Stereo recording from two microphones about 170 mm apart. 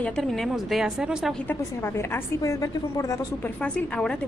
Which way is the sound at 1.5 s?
15° left (ahead or behind).